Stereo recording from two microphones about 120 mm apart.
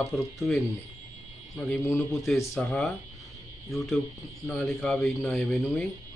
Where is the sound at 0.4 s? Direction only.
Centre (ahead or behind).